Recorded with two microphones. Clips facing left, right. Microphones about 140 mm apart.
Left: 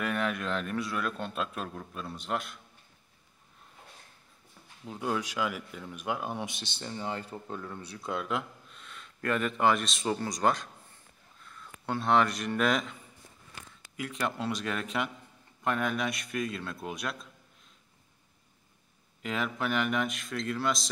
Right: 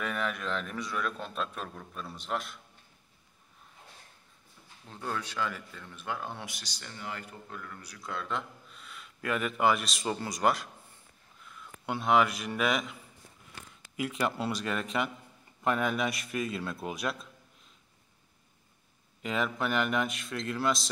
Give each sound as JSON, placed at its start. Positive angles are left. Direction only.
{"t": 0.0, "sound": "a man's voice", "side_deg": 0}
{"t": 4.8, "sound": "speech", "side_deg": 10}
{"t": 8.3, "sound": "a man's voice", "side_deg": 0}
{"t": 13.9, "sound": "a man's voice", "side_deg": -5}
{"t": 19.2, "sound": "a man's voice", "side_deg": 0}